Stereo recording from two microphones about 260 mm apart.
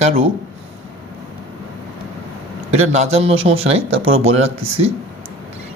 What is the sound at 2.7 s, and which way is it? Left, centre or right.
Speech, right.